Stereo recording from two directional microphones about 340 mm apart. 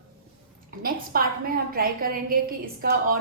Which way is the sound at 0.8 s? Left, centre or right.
Right.